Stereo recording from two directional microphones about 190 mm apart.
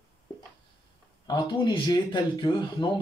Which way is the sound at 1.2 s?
25° left (ahead or behind).